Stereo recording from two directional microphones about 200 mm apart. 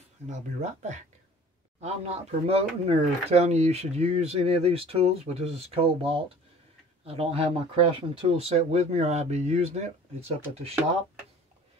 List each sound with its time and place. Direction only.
0.3 s speech: 35° right (ahead or behind)